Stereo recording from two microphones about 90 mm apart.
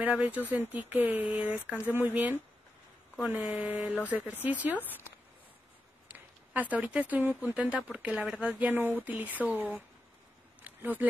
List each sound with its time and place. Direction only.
0.0 s speech: 15° right (ahead or behind)
6.1 s speech: 20° right (ahead or behind)
10.6 s a sound: 20° right (ahead or behind)